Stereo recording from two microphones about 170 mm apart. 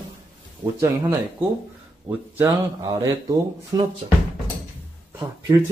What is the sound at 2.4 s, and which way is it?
Speech, 20° right (ahead or behind).